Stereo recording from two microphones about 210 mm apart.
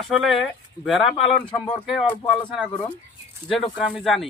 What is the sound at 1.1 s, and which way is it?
Speech, 25° left (ahead or behind).